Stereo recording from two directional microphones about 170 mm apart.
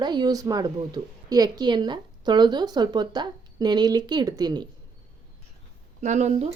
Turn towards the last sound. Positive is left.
turn(degrees=-45)  # may be behind; listen again after turning